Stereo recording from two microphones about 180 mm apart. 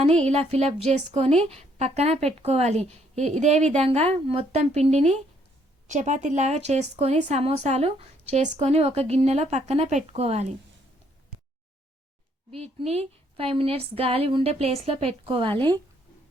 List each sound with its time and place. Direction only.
0.3 s a woman's voice: 35° right (ahead or behind)
12.8 s a woman's voice: 35° right (ahead or behind)